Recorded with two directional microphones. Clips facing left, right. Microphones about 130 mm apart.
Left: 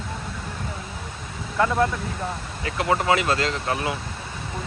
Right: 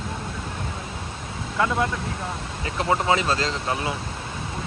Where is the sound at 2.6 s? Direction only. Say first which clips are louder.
Left 1 dB; 25° right (ahead or behind).